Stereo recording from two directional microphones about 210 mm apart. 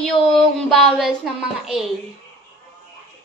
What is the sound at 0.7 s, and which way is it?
A woman's voice, centre (ahead or behind).